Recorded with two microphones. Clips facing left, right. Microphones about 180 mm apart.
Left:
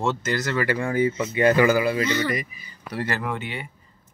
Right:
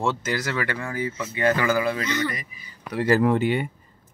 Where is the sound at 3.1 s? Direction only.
35° right (ahead or behind).